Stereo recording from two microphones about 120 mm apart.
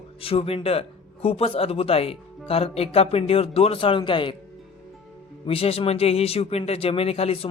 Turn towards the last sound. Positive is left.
turn(degrees=55)  # may be behind; listen again after turning